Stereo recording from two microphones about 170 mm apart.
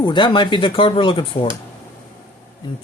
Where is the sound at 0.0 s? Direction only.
30° left (ahead or behind).